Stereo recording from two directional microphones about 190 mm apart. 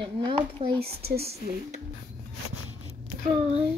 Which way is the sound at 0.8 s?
55° right (ahead or behind).